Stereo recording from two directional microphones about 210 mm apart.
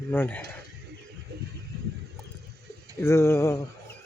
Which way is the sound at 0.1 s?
10° left (ahead or behind).